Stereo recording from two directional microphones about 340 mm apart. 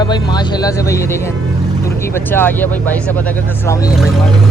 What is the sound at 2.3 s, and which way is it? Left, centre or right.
Speech, centre.